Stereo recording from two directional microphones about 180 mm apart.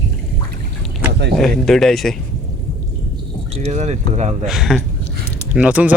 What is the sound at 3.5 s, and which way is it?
Speech, 35° right (ahead or behind).